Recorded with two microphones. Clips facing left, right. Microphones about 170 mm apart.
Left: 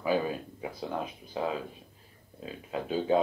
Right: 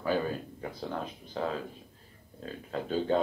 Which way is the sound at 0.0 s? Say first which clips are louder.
Left 1 dB; 10° left (ahead or behind).